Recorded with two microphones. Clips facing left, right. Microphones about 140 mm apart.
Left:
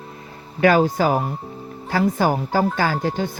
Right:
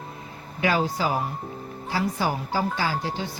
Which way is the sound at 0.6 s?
50° left (ahead or behind).